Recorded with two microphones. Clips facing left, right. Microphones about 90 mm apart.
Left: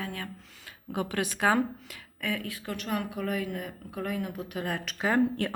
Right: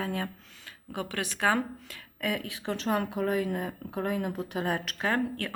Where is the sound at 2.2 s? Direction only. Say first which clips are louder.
Right 1 dB; 10° right (ahead or behind); by 4.7 s 30° right (ahead or behind).